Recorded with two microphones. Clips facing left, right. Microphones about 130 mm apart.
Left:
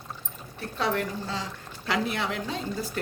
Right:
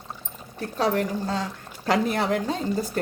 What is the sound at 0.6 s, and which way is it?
A woman's voice, 40° right (ahead or behind).